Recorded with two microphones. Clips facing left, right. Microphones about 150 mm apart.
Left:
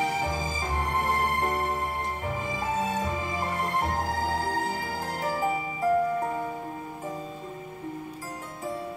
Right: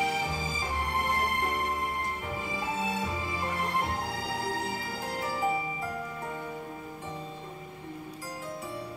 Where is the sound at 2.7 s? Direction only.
45° left (ahead or behind).